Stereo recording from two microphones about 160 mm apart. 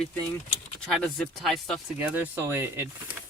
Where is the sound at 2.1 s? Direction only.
10° right (ahead or behind).